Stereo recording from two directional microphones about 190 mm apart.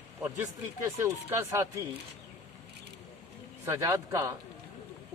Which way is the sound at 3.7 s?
20° right (ahead or behind).